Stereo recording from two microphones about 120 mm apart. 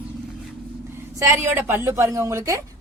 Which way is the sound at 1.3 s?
20° right (ahead or behind).